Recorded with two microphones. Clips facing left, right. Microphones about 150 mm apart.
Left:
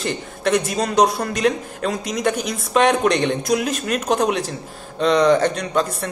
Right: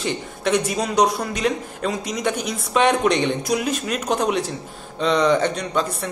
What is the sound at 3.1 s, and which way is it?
Speech, 55° left (ahead or behind).